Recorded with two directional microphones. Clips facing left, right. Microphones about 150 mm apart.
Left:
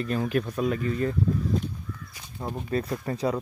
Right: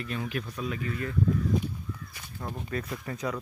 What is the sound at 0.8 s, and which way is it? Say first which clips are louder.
Speech: left 7 dB; 35° left (ahead or behind).